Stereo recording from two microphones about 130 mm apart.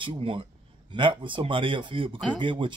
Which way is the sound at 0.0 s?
40° right (ahead or behind).